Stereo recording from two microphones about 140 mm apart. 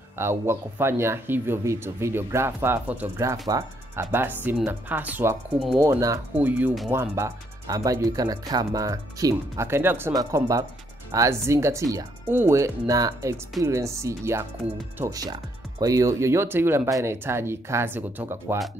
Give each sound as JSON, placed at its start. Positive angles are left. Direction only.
{"t": 0.2, "sound": "speech", "side_deg": -20}
{"t": 6.3, "sound": "speech", "side_deg": -10}